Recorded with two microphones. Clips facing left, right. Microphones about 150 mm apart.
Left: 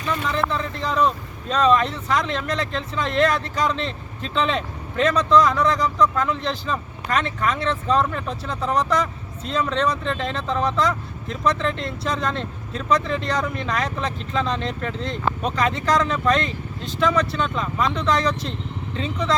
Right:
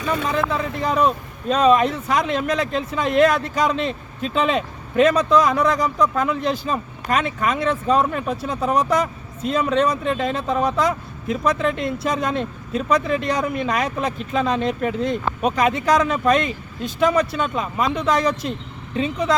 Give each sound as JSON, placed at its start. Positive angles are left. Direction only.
{"t": 0.3, "sound": "speech", "side_deg": -10}
{"t": 0.8, "sound": "speech", "side_deg": -50}
{"t": 1.0, "sound": "speech", "side_deg": -10}